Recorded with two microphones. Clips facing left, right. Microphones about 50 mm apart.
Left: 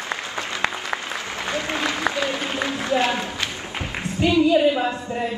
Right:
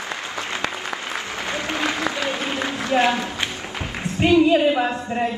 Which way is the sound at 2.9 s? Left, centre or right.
Right.